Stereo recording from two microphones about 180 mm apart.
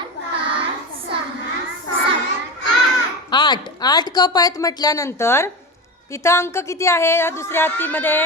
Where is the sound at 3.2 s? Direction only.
25° left (ahead or behind).